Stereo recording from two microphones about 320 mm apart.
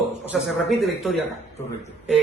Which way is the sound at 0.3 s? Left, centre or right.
Centre.